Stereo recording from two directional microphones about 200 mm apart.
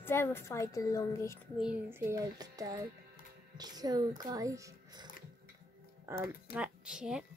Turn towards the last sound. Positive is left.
turn(degrees=-5)  # may be behind; listen again after turning